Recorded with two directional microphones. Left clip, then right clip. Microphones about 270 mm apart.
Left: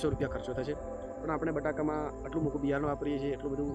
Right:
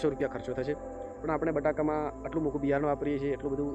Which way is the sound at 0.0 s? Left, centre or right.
Centre.